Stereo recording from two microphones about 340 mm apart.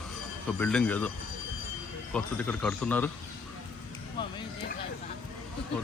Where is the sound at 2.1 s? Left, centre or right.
Centre.